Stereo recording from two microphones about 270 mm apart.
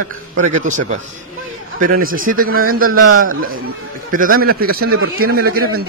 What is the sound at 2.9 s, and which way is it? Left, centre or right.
Speech, right.